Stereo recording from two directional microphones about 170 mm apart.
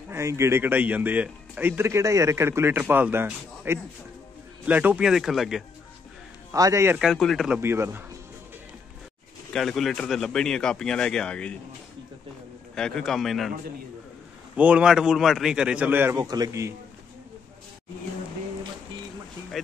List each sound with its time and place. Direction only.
0.1 s a man's voice: 15° right (ahead or behind)
6.5 s speech: 20° right (ahead or behind)
7.0 s a man's voice: centre (ahead or behind)
7.6 s speech: 15° right (ahead or behind)
9.5 s a man's voice: centre (ahead or behind)
12.7 s a man's voice: 5° left (ahead or behind)
14.6 s a man's voice: 5° right (ahead or behind)
16.2 s a man's voice: 20° right (ahead or behind)
19.6 s a sound: centre (ahead or behind)